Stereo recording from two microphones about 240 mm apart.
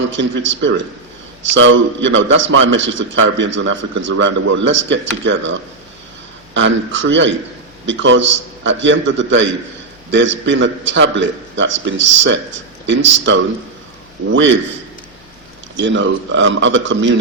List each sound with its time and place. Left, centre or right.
0.1 s a man's voice: right
15.8 s a man's voice: right